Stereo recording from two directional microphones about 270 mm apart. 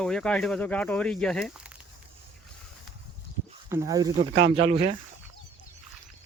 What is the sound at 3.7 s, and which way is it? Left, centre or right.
Speech, centre.